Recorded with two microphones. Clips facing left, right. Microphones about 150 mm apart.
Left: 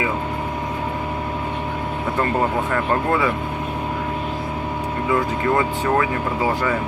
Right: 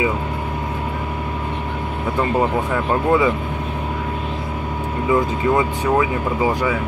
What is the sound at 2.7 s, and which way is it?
Speech, 15° right (ahead or behind).